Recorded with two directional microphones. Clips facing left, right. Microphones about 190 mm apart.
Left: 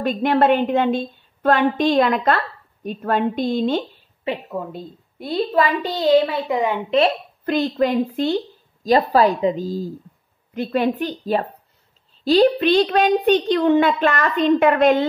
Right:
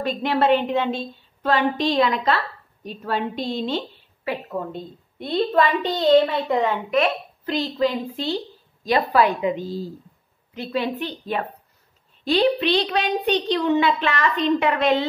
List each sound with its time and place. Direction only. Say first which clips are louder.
0.0 s a woman's voice: left 4 dB; 50° left (ahead or behind)
4.5 s a woman's voice: even; 5° left (ahead or behind)
7.4 s a woman's voice: left 3 dB; 55° left (ahead or behind)
9.1 s a woman's voice: left 3 dB; 35° left (ahead or behind)
10.5 s a woman's voice: left 5 dB; 50° left (ahead or behind)